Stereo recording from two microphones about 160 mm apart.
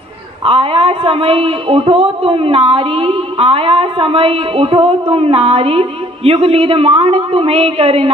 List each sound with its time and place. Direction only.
0.4 s speech: 35° right (ahead or behind)